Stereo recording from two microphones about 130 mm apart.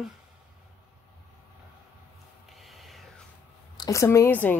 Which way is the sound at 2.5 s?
Centre (ahead or behind).